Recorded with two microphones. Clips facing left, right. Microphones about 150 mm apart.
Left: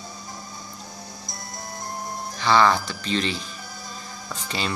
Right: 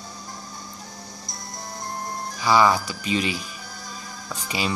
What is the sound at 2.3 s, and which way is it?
Speech, 10° right (ahead or behind).